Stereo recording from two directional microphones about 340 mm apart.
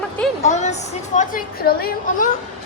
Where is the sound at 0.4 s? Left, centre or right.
Centre.